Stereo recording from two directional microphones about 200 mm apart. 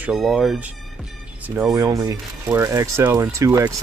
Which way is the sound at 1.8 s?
15° right (ahead or behind).